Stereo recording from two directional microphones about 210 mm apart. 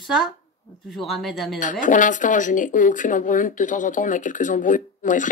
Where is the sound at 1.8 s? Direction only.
40° left (ahead or behind).